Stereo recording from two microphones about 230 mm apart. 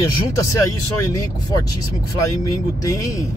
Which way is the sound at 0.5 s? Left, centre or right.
Centre.